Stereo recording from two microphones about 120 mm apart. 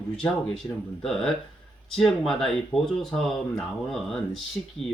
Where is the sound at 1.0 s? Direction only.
5° left (ahead or behind).